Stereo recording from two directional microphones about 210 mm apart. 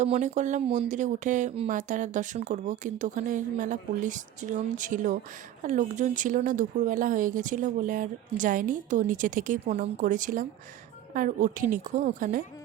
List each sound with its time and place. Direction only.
0.0 s speech: 35° right (ahead or behind)